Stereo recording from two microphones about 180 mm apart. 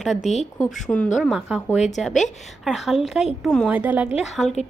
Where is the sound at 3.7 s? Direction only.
10° right (ahead or behind).